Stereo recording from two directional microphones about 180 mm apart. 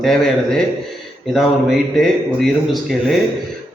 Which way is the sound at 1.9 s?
Centre (ahead or behind).